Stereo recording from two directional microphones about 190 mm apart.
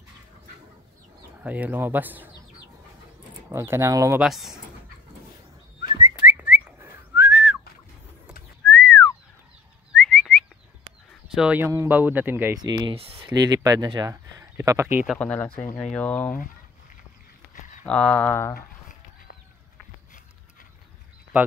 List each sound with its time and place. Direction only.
1.4 s speech: 10° right (ahead or behind)
4.2 s speech: centre (ahead or behind)
5.8 s whistling: 15° right (ahead or behind)
8.6 s whistling: 5° left (ahead or behind)
11.3 s speech: 5° right (ahead or behind)
12.5 s speech: 20° right (ahead or behind)
15.1 s speech: 5° left (ahead or behind)
17.8 s speech: 5° left (ahead or behind)
18.5 s a sound: 55° left (ahead or behind)